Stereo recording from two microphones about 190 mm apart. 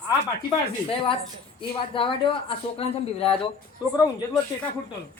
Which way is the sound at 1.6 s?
25° left (ahead or behind).